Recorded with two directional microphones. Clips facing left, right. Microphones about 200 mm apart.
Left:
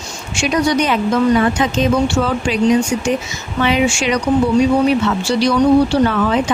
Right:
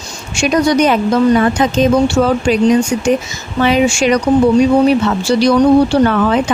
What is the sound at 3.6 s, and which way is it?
Speech, 40° right (ahead or behind).